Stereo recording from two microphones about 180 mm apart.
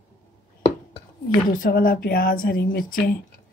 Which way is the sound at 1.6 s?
55° left (ahead or behind).